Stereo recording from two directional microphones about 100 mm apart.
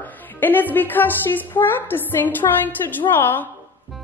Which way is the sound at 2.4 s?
50° left (ahead or behind).